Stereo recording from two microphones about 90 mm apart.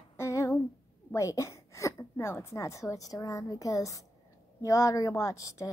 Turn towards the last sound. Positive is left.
turn(degrees=35)  # may be behind; listen again after turning